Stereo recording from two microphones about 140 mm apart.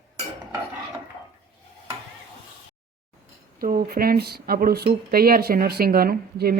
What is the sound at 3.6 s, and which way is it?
Speech, 90° right.